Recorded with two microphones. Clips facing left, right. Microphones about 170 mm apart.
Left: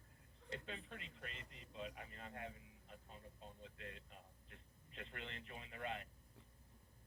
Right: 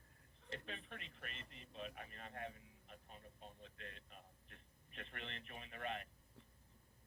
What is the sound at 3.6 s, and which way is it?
A man's voice, 20° left (ahead or behind).